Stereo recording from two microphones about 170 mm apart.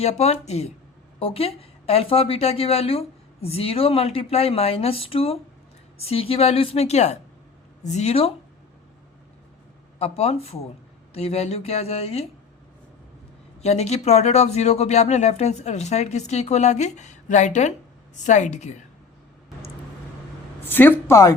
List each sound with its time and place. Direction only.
0.0 s speech: 40° left (ahead or behind)
10.0 s speech: 35° left (ahead or behind)
13.6 s speech: 40° left (ahead or behind)
20.7 s speech: 10° left (ahead or behind)